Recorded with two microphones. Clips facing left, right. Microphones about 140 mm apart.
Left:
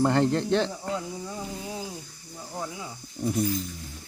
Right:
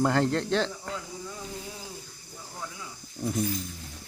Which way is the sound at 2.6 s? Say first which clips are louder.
Left 5 dB; 30° left (ahead or behind).